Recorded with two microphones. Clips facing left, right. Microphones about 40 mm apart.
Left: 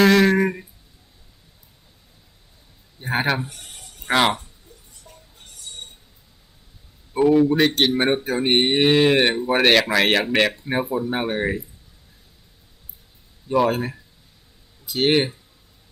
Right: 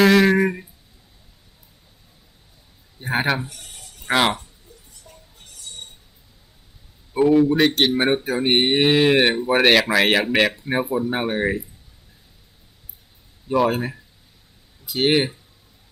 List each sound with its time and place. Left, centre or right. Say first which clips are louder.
0.0 s a sound: right 1 dB; centre
3.0 s speech: even; centre
3.5 s a sound: even; left
4.1 s speech: even; centre
5.1 s music: even; centre
7.1 s speech: even; centre
13.5 s speech: even; centre